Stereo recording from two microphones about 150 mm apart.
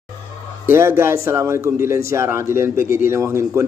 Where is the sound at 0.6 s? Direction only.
15° right (ahead or behind).